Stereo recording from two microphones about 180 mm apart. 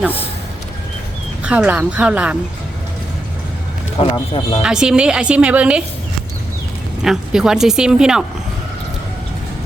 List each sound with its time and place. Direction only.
1.5 s speech: 5° right (ahead or behind)
4.1 s speech: 30° left (ahead or behind)
4.6 s speech: 5° right (ahead or behind)
7.0 s speech: 5° right (ahead or behind)